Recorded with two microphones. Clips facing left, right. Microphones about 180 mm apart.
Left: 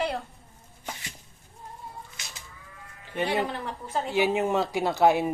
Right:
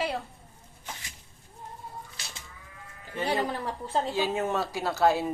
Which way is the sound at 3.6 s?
30° right (ahead or behind).